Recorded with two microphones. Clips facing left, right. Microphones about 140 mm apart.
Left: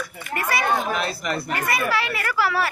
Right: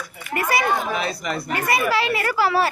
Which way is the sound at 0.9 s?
Centre (ahead or behind).